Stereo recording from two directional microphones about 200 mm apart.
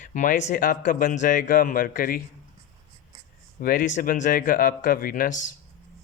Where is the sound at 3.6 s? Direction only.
45° left (ahead or behind).